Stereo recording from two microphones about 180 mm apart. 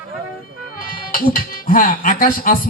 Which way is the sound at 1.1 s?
50° left (ahead or behind).